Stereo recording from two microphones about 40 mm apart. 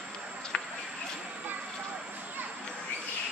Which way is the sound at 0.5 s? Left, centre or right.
Left.